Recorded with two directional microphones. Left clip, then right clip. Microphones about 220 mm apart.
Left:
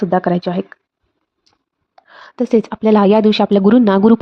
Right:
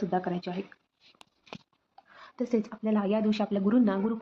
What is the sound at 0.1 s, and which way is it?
Speech, 50° left (ahead or behind).